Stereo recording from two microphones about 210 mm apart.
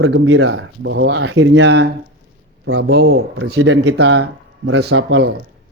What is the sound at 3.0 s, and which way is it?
Speech, 50° right (ahead or behind).